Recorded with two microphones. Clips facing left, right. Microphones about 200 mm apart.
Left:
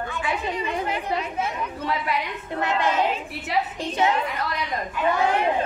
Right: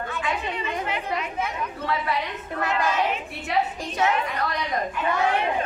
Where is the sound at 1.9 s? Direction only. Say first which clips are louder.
Even; 20° left (ahead or behind).